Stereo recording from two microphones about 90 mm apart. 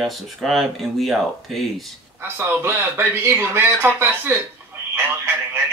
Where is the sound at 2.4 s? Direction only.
25° right (ahead or behind).